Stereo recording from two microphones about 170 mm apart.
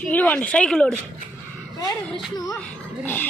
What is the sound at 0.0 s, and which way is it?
Speech, 10° left (ahead or behind).